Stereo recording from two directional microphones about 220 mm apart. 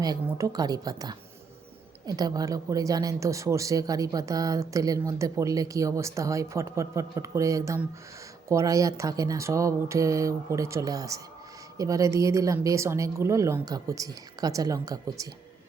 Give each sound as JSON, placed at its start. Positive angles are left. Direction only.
{"t": 0.0, "sound": "speech", "side_deg": -15}